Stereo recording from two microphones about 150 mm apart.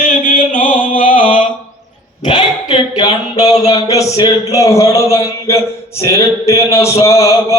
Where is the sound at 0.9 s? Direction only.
35° left (ahead or behind).